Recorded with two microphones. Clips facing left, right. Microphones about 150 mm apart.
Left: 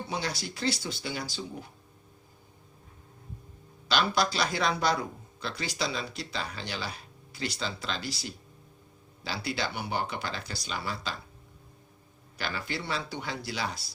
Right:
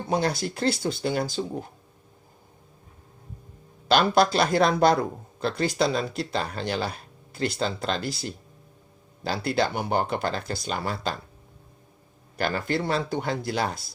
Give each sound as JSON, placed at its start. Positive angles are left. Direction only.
{"t": 0.1, "sound": "speech", "side_deg": -50}
{"t": 3.8, "sound": "speech", "side_deg": -50}
{"t": 12.4, "sound": "speech", "side_deg": -50}